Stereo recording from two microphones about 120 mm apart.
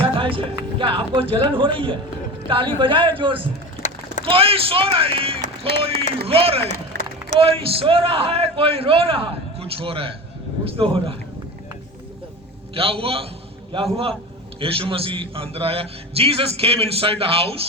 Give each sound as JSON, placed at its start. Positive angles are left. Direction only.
{"t": 0.2, "sound": "a man's voice", "side_deg": -45}
{"t": 3.8, "sound": "a sound", "side_deg": 90}
{"t": 4.3, "sound": "a man's voice", "side_deg": -50}
{"t": 12.7, "sound": "a man's voice", "side_deg": -50}